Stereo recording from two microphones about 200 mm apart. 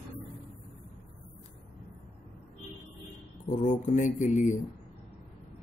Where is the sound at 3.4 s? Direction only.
40° left (ahead or behind).